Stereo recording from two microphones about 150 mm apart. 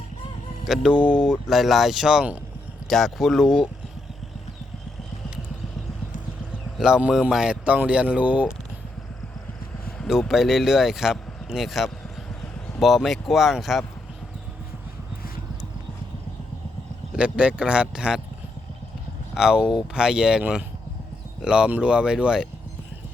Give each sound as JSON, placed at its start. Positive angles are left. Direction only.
{"t": 0.6, "sound": "speech", "side_deg": 0}
{"t": 6.7, "sound": "speech", "side_deg": -5}
{"t": 10.0, "sound": "speech", "side_deg": 0}
{"t": 17.2, "sound": "speech", "side_deg": -5}
{"t": 19.3, "sound": "speech", "side_deg": -5}